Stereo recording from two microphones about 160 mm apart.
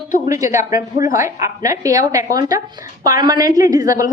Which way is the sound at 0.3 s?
20° right (ahead or behind).